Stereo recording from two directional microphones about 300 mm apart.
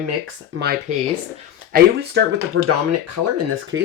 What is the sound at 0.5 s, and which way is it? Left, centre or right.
Speech, right.